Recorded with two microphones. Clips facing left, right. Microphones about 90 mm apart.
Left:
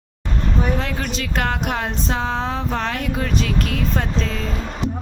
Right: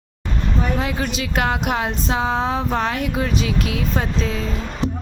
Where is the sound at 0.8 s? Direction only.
10° right (ahead or behind).